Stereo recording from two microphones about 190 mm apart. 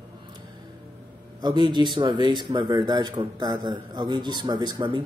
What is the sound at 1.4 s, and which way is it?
Speech, 25° right (ahead or behind).